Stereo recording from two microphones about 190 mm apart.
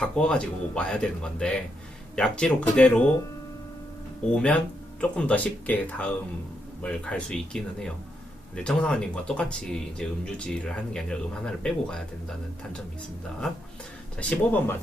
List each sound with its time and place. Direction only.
0.0 s speech: 5° left (ahead or behind)
4.4 s speech: 5° left (ahead or behind)
14.2 s speech: 10° left (ahead or behind)